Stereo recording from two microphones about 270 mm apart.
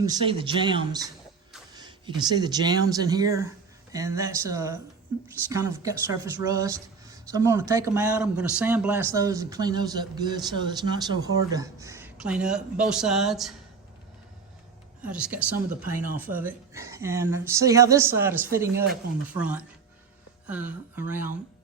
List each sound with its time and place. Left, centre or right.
0.0 s speech: centre
15.0 s speech: centre